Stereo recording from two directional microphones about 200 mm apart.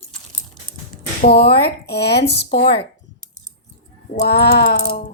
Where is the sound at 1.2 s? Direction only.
50° left (ahead or behind).